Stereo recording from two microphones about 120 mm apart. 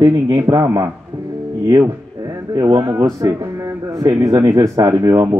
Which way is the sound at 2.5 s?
30° right (ahead or behind).